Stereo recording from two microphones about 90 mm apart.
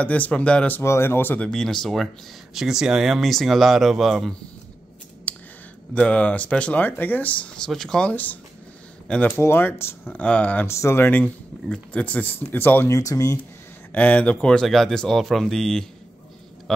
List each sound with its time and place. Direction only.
0.0 s speech: 15° left (ahead or behind)
0.8 s speech: 30° left (ahead or behind)
1.5 s speech: 5° left (ahead or behind)
5.3 s a sound: 20° left (ahead or behind)
5.9 s speech: 15° left (ahead or behind)
7.6 s speech: 5° left (ahead or behind)
8.1 s speech: 20° left (ahead or behind)
9.4 s speech: 25° left (ahead or behind)
10.1 s speech: 15° left (ahead or behind)
10.7 s speech: 30° left (ahead or behind)
12.9 s speech: 40° left (ahead or behind)
13.9 s speech: 15° left (ahead or behind)